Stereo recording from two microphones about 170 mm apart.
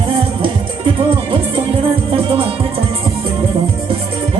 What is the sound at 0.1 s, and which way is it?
Music, 30° right (ahead or behind).